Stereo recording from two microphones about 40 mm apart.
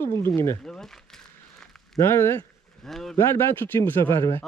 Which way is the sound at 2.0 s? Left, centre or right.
Left.